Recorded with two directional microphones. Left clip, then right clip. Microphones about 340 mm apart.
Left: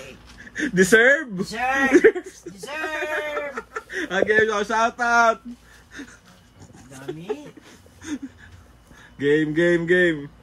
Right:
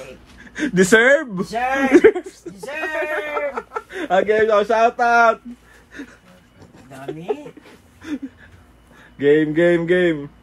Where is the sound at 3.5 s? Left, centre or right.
Right.